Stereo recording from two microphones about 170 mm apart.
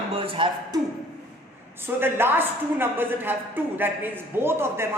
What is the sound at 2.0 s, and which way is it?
A woman's voice, 15° right (ahead or behind).